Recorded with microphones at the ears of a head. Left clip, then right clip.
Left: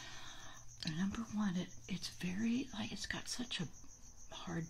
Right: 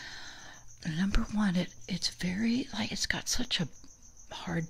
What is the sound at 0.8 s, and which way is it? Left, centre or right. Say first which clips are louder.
Speech: right 8 dB; right.